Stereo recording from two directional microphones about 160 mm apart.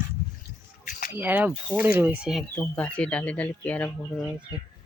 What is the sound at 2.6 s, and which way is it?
Speech, 5° left (ahead or behind).